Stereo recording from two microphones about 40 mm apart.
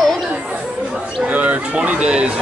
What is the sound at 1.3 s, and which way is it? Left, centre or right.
Speech, right.